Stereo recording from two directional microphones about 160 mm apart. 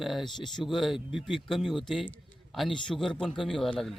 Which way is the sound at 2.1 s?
Centre (ahead or behind).